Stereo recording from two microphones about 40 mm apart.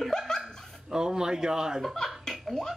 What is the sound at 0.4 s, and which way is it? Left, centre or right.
Dog, centre.